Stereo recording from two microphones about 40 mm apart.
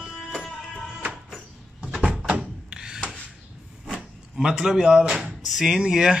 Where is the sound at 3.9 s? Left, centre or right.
Centre.